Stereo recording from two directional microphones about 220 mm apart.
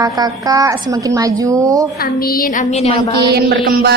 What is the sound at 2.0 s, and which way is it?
A woman's voice, 40° left (ahead or behind).